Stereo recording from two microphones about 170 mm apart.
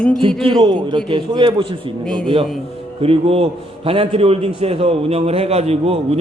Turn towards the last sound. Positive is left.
turn(degrees=-35)  # may be behind; listen again after turning